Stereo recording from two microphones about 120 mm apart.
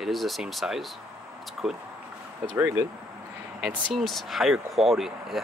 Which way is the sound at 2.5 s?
20° right (ahead or behind).